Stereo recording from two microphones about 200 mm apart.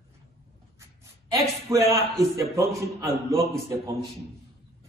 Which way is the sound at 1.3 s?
15° right (ahead or behind).